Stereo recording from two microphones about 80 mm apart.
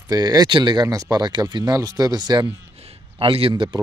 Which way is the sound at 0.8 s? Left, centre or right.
Right.